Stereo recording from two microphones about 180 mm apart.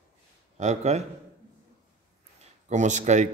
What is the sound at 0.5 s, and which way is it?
Speech, 40° right (ahead or behind).